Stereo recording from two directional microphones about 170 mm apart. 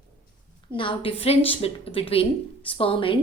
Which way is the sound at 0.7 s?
30° left (ahead or behind).